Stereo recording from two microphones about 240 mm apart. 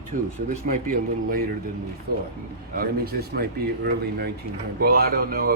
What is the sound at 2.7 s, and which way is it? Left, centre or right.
A man's voice, right.